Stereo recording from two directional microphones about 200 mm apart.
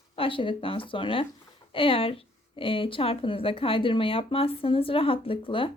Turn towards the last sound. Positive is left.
turn(degrees=25)  # may be behind; listen again after turning